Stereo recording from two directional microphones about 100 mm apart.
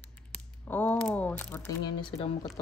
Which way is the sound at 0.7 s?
15° left (ahead or behind).